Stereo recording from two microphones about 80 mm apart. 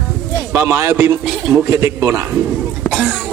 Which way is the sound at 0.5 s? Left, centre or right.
Right.